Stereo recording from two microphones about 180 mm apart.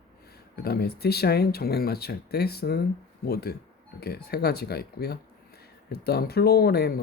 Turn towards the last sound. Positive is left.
turn(degrees=60)  # may be behind; listen again after turning